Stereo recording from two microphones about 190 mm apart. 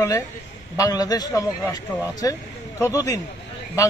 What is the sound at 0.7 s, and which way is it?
A man's voice, 20° left (ahead or behind).